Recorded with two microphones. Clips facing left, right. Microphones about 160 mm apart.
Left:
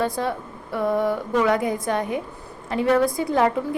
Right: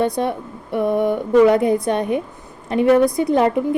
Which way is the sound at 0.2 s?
20° right (ahead or behind).